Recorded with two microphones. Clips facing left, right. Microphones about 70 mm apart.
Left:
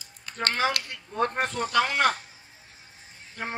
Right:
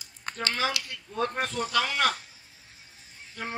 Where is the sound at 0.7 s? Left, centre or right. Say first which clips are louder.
Left 3 dB; left.